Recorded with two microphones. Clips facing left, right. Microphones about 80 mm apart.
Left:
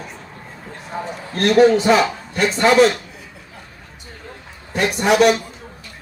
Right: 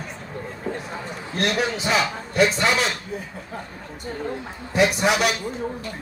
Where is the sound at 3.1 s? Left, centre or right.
Right.